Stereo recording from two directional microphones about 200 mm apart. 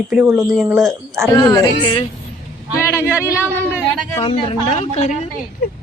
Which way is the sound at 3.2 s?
15° left (ahead or behind).